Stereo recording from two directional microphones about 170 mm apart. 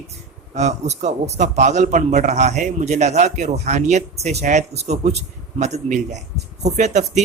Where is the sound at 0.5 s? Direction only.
40° right (ahead or behind).